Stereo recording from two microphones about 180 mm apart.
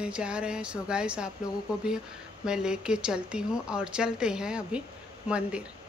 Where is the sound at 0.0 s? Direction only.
5° right (ahead or behind).